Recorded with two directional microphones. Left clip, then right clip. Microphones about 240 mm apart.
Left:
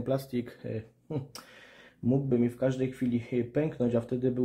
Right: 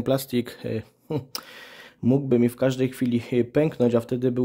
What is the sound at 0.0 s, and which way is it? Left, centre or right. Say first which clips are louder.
Speech: right 7 dB; right.